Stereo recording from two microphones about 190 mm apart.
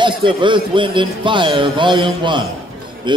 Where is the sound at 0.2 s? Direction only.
25° right (ahead or behind).